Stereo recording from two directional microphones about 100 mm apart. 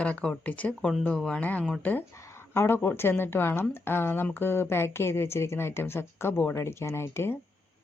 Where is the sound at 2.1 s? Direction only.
30° left (ahead or behind).